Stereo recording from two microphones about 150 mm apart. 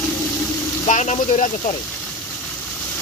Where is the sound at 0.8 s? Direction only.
50° left (ahead or behind).